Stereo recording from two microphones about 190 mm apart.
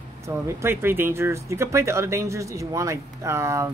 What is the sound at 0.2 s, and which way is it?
Speech, 15° right (ahead or behind).